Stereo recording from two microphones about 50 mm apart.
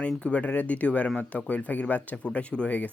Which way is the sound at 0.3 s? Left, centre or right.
Left.